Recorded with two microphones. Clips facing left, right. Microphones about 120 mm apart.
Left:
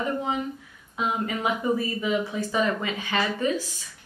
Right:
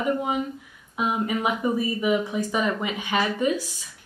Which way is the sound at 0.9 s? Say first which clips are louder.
Right 2 dB; 15° right (ahead or behind).